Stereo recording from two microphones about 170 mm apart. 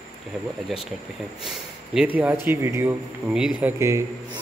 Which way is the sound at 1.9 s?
10° right (ahead or behind).